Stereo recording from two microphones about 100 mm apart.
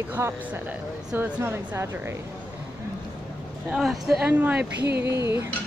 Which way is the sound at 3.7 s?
5° right (ahead or behind).